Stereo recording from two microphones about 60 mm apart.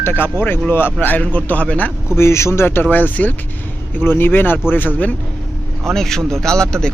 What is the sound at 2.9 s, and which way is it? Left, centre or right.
Speech, left.